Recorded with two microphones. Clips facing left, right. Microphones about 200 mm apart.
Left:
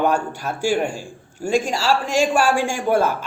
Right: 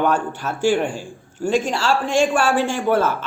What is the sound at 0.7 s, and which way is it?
Speech, 40° left (ahead or behind).